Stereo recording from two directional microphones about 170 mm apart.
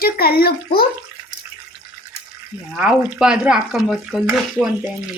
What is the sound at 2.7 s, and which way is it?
Speech, 5° right (ahead or behind).